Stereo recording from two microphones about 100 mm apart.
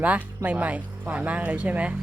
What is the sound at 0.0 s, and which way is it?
Speech, 15° right (ahead or behind).